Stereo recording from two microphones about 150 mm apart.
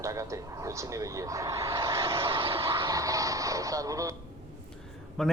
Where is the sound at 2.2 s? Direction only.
35° right (ahead or behind).